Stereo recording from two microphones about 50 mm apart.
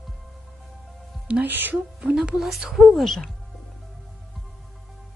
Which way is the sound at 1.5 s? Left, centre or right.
Right.